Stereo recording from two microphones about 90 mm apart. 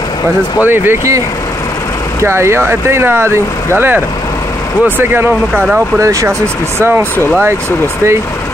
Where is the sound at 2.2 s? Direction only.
30° right (ahead or behind).